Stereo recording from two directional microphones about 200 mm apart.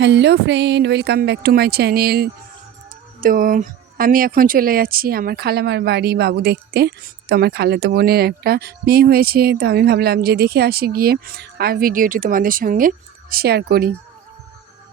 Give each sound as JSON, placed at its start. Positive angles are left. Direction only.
{"t": 0.0, "sound": "a woman's voice", "side_deg": -60}